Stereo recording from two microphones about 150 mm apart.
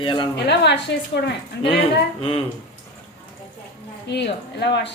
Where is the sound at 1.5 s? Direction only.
90° left.